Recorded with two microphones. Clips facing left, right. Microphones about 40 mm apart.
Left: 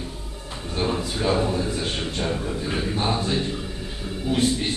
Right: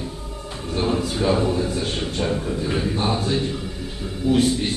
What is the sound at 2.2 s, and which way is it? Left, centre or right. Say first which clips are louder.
A man's voice: right 4 dB; centre.